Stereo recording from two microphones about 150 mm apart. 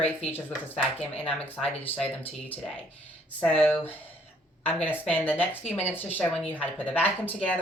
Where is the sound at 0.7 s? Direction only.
45° left (ahead or behind).